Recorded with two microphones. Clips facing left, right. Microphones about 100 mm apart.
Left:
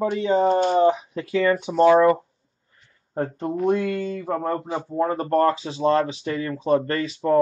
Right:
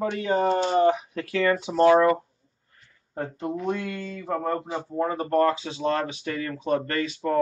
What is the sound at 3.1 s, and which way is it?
Speech, 35° left (ahead or behind).